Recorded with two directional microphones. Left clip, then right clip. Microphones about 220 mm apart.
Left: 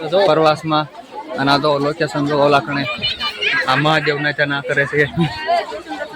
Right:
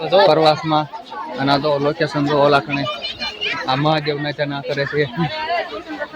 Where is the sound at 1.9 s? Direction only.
5° right (ahead or behind).